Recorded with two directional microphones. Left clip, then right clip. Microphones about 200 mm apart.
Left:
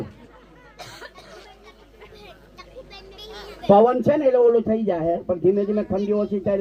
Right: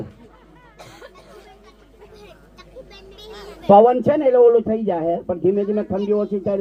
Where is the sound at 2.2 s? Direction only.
45° right (ahead or behind).